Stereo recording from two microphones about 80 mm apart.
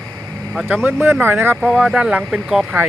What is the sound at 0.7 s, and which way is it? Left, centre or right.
Speech, right.